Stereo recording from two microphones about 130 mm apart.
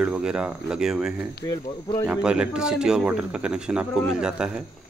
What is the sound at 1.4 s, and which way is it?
Speech, 25° left (ahead or behind).